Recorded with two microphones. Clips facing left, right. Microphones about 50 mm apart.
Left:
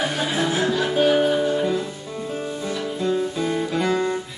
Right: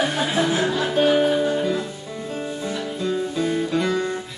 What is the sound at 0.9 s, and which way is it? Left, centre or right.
Music, centre.